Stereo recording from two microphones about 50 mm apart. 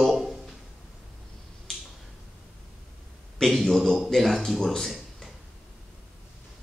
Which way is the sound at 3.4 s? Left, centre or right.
Centre.